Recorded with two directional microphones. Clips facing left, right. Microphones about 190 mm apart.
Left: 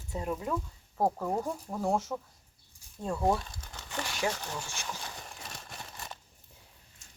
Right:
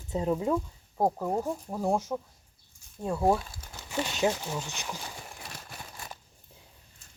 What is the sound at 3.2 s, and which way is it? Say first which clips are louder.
Crumpling: right 3 dB; 5° right (ahead or behind).